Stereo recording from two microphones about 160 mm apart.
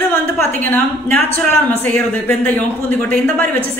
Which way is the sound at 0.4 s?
10° left (ahead or behind).